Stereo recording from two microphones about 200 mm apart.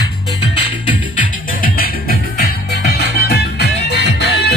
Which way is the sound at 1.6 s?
50° left (ahead or behind).